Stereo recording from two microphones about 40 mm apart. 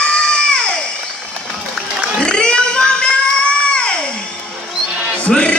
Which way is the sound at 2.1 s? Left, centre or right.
Left.